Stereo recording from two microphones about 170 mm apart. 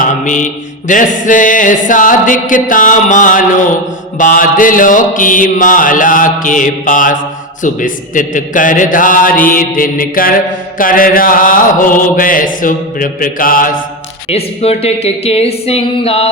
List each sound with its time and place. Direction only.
0.0 s mantra: 50° left (ahead or behind)
10.8 s chant: 55° left (ahead or behind)
14.3 s a woman's voice: 35° left (ahead or behind)